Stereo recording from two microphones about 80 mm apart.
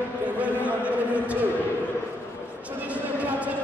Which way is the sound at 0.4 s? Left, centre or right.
Centre.